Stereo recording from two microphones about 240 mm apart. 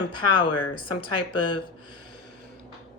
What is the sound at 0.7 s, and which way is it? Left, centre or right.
Speech, left.